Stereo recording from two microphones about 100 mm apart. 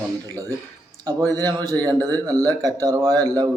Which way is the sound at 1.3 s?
40° right (ahead or behind).